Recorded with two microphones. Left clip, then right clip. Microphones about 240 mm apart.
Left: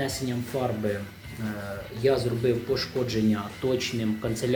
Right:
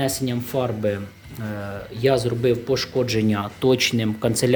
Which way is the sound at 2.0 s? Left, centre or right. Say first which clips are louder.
Right 5 dB; right.